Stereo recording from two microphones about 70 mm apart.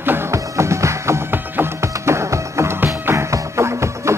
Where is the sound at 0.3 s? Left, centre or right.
Right.